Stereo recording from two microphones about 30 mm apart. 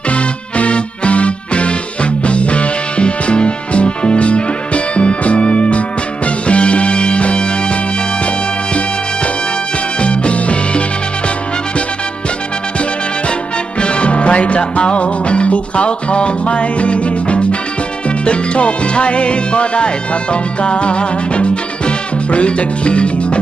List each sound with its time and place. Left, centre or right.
0.1 s music: left
10.0 s music: left
13.7 s music: left